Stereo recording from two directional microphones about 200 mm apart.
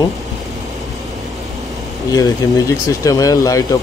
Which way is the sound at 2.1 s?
15° left (ahead or behind).